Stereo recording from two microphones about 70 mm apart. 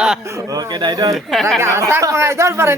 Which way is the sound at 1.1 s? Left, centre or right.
Centre.